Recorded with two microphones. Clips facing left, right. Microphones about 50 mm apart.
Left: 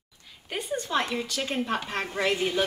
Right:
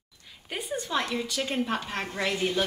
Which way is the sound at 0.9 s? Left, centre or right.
Centre.